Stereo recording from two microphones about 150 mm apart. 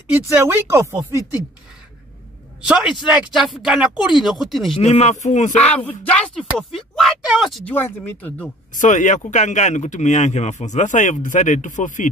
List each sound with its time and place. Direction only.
0.1 s speech: 15° right (ahead or behind)
2.7 s speech: 5° right (ahead or behind)
4.7 s speech: 45° left (ahead or behind)
5.6 s speech: 10° left (ahead or behind)
7.7 s speech: 15° left (ahead or behind)
8.7 s speech: 55° left (ahead or behind)